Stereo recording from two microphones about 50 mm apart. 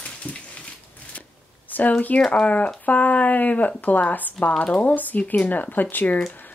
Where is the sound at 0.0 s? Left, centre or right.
Left.